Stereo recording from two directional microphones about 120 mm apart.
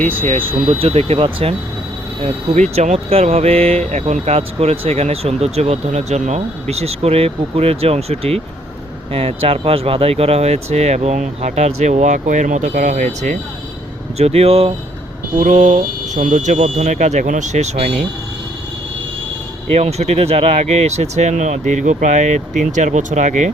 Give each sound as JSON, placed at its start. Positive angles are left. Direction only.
{"t": 0.1, "sound": "speech", "side_deg": -50}
{"t": 2.2, "sound": "speech", "side_deg": -65}
{"t": 14.2, "sound": "speech", "side_deg": -60}
{"t": 15.4, "sound": "speech", "side_deg": -80}
{"t": 17.7, "sound": "speech", "side_deg": -55}
{"t": 19.7, "sound": "speech", "side_deg": -65}